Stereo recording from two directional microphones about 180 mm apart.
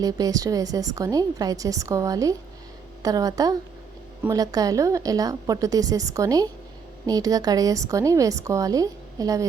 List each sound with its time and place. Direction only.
0.0 s a woman's voice: 20° right (ahead or behind)